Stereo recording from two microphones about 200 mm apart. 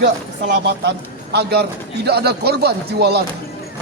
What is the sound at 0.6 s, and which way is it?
Speech, 55° right (ahead or behind).